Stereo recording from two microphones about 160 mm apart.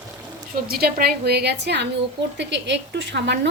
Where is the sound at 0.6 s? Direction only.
75° right (ahead or behind).